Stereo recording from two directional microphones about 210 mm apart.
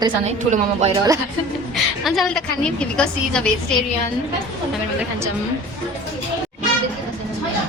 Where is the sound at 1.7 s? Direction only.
Centre (ahead or behind).